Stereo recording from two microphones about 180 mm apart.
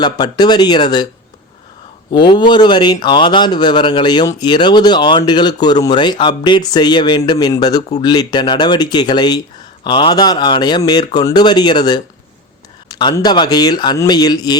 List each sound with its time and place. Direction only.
0.0 s speech: 25° left (ahead or behind)
2.1 s speech: 25° left (ahead or behind)